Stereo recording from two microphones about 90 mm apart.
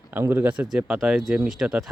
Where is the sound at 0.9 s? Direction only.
Centre (ahead or behind).